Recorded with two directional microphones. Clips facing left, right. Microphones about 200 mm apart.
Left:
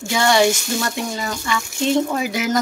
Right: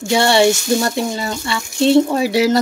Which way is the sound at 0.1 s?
30° right (ahead or behind).